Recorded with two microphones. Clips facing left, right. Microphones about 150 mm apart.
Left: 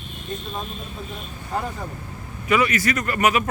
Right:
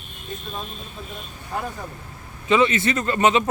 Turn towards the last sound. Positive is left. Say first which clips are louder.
# right 2 dB
turn(degrees=-25)  # may be behind; listen again after turning